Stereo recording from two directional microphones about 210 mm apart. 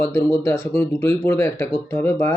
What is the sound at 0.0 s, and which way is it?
Speech, 15° left (ahead or behind).